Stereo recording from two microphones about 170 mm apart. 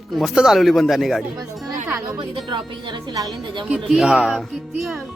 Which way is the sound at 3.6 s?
5° right (ahead or behind).